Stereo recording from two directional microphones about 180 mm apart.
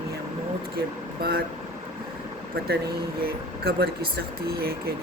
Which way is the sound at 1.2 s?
55° right (ahead or behind).